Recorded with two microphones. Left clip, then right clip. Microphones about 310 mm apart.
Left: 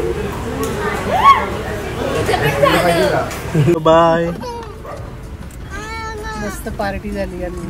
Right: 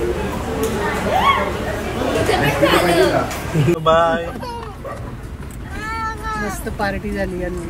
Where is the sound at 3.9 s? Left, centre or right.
Left.